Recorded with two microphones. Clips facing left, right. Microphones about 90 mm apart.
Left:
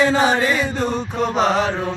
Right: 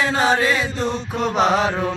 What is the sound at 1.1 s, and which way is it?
Choir, 5° right (ahead or behind).